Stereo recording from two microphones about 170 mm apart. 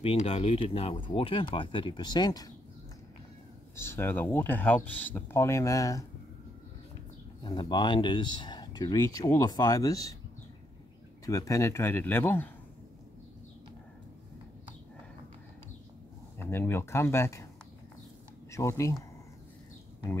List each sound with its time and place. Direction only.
0.0 s speech: 35° left (ahead or behind)
3.7 s speech: 15° left (ahead or behind)
7.4 s speech: 25° left (ahead or behind)
11.2 s speech: 20° left (ahead or behind)
16.3 s speech: 15° left (ahead or behind)
18.5 s speech: 15° left (ahead or behind)